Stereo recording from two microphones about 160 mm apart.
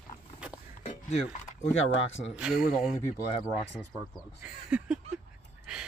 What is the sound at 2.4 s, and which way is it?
Speech, 5° right (ahead or behind).